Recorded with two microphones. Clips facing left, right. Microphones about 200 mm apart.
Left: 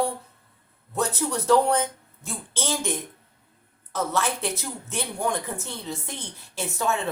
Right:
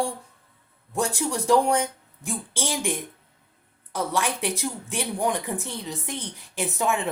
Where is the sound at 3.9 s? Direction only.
15° right (ahead or behind).